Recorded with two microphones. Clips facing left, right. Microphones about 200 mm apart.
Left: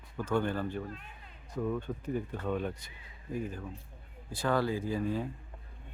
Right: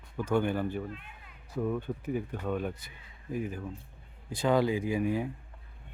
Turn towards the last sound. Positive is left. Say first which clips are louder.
# right 3 dB
turn(degrees=-10)  # may be behind; listen again after turning